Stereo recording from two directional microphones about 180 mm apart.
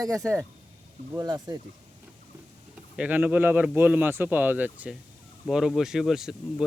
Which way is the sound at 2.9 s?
5° right (ahead or behind).